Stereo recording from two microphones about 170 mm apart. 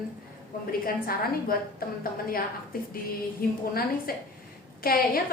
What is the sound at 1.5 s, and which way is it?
Speech, 60° left (ahead or behind).